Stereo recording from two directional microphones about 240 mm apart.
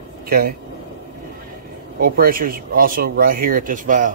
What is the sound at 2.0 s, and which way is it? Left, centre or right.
Speech, right.